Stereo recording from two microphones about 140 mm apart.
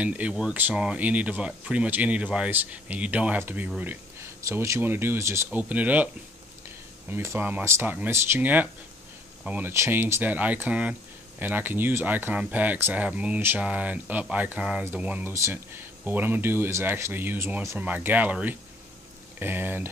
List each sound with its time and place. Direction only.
0.0 s speech: 10° right (ahead or behind)
7.1 s speech: 15° right (ahead or behind)